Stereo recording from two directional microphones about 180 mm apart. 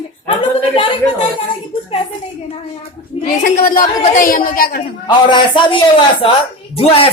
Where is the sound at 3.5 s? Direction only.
50° left (ahead or behind).